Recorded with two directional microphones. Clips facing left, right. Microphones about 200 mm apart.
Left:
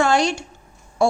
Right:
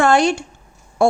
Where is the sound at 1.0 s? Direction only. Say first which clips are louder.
Right 3 dB; 55° right (ahead or behind).